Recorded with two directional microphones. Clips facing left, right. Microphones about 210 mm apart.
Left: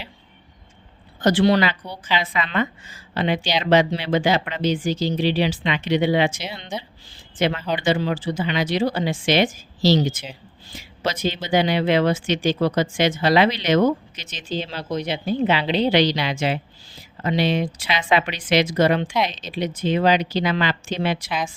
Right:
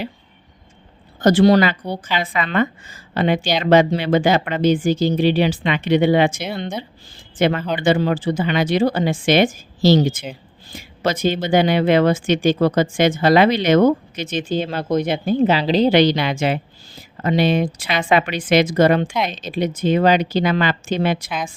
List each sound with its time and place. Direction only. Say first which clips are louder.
1.2 s speech: right 4 dB; 40° right (ahead or behind)
21.2 s speech: even; centre (ahead or behind)